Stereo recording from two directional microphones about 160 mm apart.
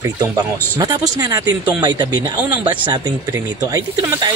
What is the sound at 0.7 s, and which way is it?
Speech, 25° right (ahead or behind).